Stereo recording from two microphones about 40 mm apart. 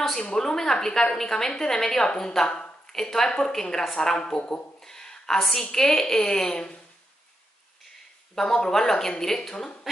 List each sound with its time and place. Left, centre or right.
0.4 s a woman's voice: centre
4.5 s a sound: centre
5.6 s a woman's voice: centre
8.4 s a woman's voice: centre